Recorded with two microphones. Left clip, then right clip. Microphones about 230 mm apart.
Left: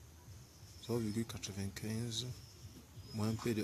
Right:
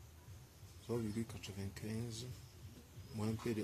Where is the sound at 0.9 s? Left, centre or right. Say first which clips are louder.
Left 3 dB; centre.